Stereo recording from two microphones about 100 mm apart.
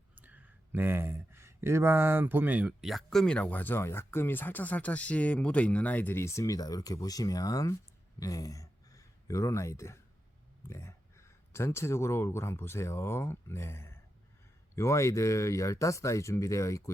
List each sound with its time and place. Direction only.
0.2 s speech: 15° right (ahead or behind)
2.8 s speech: centre (ahead or behind); by 16.9 s 30° left (ahead or behind)